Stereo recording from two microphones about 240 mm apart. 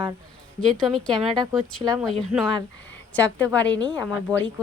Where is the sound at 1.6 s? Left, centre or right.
Centre.